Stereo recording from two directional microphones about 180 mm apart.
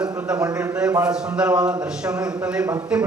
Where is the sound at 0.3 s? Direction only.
5° right (ahead or behind).